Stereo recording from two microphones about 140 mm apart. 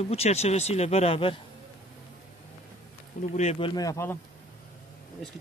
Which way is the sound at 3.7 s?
20° left (ahead or behind).